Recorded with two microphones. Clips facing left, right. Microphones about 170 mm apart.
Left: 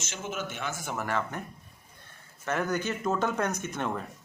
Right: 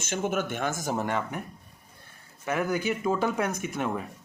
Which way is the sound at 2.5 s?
5° right (ahead or behind).